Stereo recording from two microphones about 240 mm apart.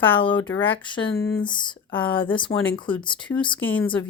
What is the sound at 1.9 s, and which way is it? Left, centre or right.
Speech, centre.